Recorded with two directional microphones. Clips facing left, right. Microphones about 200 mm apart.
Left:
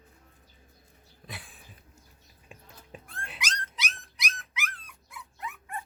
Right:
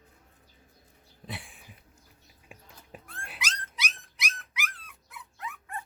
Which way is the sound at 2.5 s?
5° right (ahead or behind).